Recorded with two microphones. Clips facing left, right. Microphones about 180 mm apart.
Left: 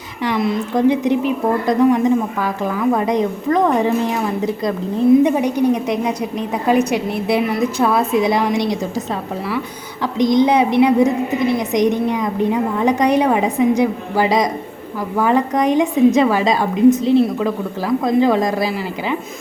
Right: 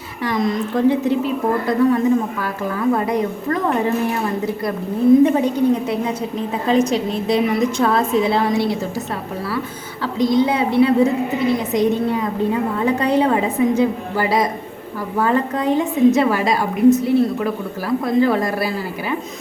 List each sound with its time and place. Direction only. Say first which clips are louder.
0.3 s a woman's voice: left 1 dB; 10° left (ahead or behind)
10.0 s a woman's voice: left 2 dB; 20° left (ahead or behind)